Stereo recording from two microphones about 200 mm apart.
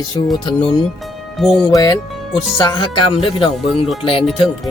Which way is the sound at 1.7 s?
20° left (ahead or behind).